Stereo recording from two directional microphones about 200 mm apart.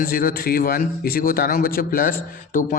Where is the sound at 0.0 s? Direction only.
45° left (ahead or behind).